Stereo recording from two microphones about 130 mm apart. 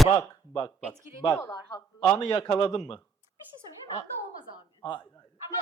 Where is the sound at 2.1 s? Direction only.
30° left (ahead or behind).